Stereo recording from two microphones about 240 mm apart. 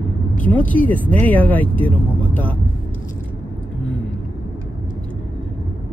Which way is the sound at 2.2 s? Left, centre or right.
Centre.